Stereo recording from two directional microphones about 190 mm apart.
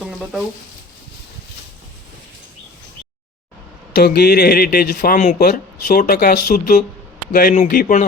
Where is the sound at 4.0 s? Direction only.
55° left (ahead or behind).